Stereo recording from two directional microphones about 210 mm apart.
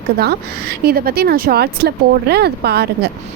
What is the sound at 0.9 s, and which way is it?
Speech, 45° right (ahead or behind).